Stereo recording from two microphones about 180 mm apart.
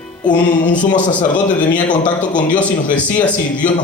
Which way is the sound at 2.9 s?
45° left (ahead or behind).